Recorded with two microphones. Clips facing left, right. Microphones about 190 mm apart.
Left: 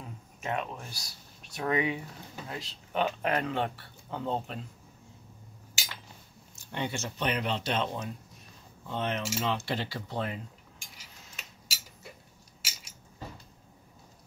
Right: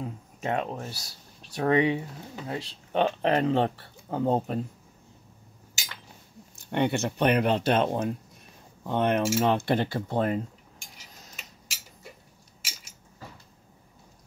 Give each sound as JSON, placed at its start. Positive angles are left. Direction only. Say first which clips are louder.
{"t": 0.0, "sound": "speech", "louder": "right 6 dB", "side_deg": -35}
{"t": 6.5, "sound": "speech", "louder": "right 9 dB", "side_deg": -60}